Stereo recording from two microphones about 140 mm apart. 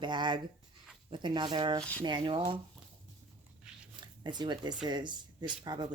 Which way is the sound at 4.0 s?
30° right (ahead or behind).